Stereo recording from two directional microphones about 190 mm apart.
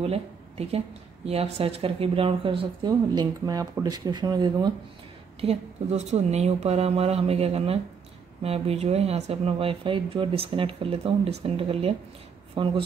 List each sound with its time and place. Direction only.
0.0 s speech: 30° right (ahead or behind)
5.4 s speech: 35° right (ahead or behind)